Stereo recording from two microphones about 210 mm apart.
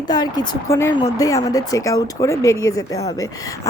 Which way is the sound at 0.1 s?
20° left (ahead or behind).